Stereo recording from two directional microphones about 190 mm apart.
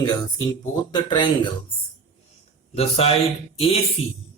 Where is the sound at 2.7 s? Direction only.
30° left (ahead or behind).